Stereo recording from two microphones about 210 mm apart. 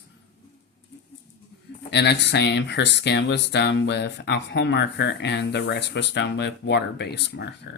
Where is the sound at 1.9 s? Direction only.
55° left (ahead or behind).